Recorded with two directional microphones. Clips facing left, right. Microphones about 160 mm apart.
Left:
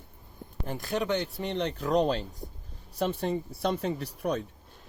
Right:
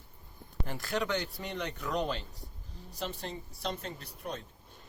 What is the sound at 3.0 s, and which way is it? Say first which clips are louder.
Speech: left 10 dB; 60° left (ahead or behind).